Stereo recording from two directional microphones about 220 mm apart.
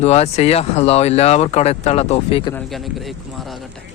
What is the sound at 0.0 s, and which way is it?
Speech, 30° left (ahead or behind).